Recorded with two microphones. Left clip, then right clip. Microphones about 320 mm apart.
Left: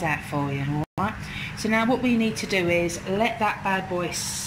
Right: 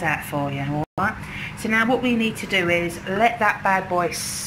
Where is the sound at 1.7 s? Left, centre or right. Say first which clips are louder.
Right 3 dB; centre.